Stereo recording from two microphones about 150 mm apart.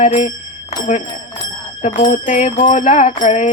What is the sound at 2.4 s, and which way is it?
Music, 40° left (ahead or behind).